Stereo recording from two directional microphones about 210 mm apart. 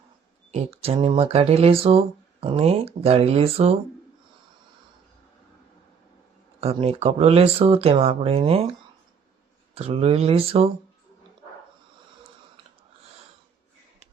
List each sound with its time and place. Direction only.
0.5 s speech: 30° right (ahead or behind)
6.6 s speech: 30° right (ahead or behind)
9.7 s speech: 30° right (ahead or behind)